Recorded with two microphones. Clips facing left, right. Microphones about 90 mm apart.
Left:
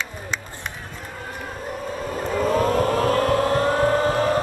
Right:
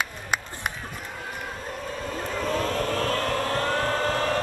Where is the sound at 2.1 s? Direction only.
10° left (ahead or behind).